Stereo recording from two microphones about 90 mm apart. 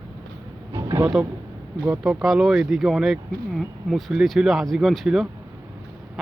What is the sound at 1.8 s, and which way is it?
Speech, 10° right (ahead or behind).